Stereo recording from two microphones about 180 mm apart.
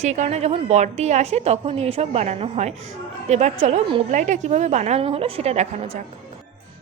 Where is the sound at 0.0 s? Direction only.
40° right (ahead or behind).